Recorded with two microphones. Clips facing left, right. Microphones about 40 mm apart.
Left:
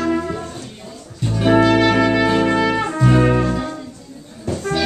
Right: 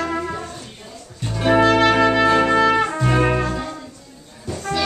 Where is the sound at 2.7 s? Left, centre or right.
Centre.